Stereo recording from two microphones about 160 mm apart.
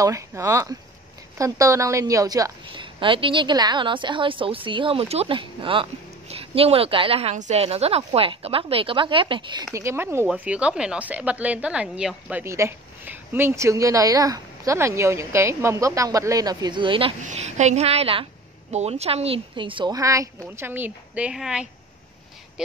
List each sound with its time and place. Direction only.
0.0 s a woman's voice: 15° right (ahead or behind)
9.8 s speech: 15° right (ahead or behind); by 17.1 s 30° right (ahead or behind)
17.2 s a woman's voice: 45° right (ahead or behind); by 21.6 s 5° right (ahead or behind)